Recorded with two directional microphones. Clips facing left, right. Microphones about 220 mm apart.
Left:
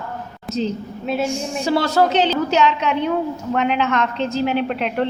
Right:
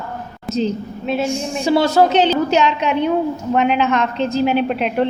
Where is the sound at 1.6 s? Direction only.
15° right (ahead or behind).